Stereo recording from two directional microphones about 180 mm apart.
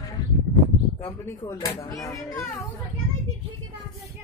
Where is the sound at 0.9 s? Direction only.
20° left (ahead or behind).